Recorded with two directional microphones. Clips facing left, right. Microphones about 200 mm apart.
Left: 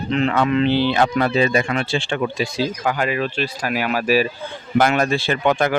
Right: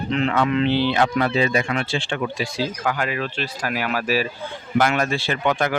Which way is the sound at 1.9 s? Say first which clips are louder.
Left 3 dB; 25° left (ahead or behind).